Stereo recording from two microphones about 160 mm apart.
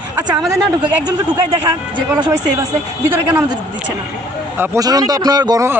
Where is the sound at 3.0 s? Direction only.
15° right (ahead or behind).